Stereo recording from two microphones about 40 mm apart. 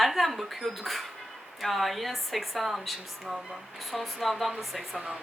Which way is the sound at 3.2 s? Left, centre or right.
Centre.